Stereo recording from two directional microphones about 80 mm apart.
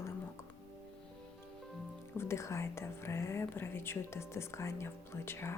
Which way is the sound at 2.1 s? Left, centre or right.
Left.